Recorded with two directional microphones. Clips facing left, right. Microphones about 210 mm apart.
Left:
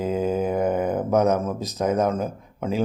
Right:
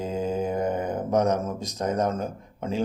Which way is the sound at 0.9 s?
5° left (ahead or behind).